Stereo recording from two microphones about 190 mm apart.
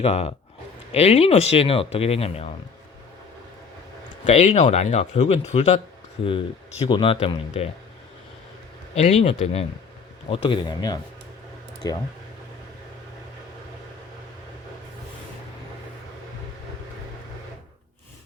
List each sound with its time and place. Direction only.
0.0 s speech: 30° left (ahead or behind)
4.3 s speech: 35° left (ahead or behind)
9.0 s speech: 35° left (ahead or behind)